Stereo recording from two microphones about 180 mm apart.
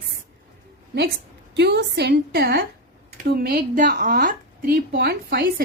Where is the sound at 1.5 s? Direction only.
75° right (ahead or behind); by 4.8 s 50° right (ahead or behind).